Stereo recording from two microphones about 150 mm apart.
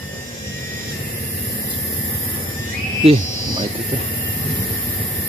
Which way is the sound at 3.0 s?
40° right (ahead or behind).